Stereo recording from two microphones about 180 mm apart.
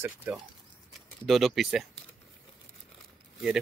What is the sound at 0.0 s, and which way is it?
Speech, 10° right (ahead or behind).